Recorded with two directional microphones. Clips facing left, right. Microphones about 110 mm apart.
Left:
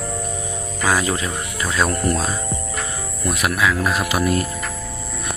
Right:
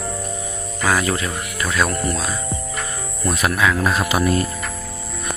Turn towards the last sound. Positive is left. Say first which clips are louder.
# right 1 dB
turn(degrees=0)  # may be behind; listen again after turning